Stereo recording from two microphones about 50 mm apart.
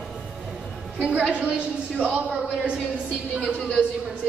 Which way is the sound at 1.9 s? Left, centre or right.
Right.